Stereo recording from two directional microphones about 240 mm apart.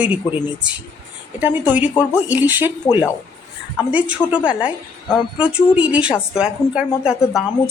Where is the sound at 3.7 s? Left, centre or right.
Centre.